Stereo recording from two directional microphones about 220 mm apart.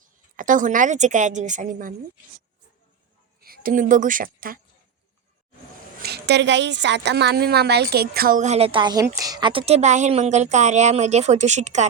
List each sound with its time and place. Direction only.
0.0 s a woman's voice: 35° right (ahead or behind)
3.4 s a woman's voice: 40° right (ahead or behind)
6.0 s a woman's voice: 50° right (ahead or behind); by 11.9 s 30° right (ahead or behind)